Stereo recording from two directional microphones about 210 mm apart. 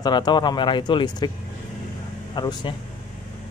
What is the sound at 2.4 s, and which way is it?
Speech, 20° left (ahead or behind).